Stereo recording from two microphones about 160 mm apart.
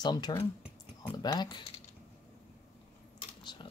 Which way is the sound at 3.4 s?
30° left (ahead or behind).